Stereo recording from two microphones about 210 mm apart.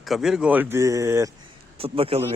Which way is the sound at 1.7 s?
25° right (ahead or behind).